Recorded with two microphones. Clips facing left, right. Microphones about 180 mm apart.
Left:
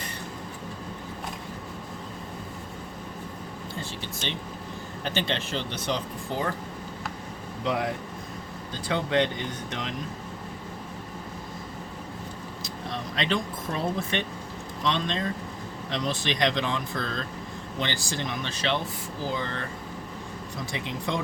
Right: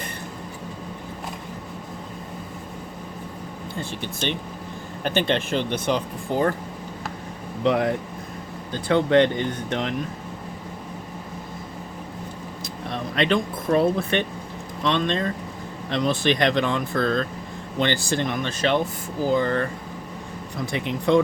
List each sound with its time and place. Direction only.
5.0 s speech: 55° right (ahead or behind)
7.6 s speech: 60° right (ahead or behind)
12.6 s speech: 60° right (ahead or behind)
20.7 s speech: 60° right (ahead or behind)